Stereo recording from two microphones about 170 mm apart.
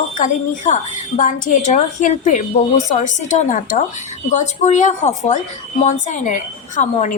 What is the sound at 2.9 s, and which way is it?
A woman's voice, 45° left (ahead or behind).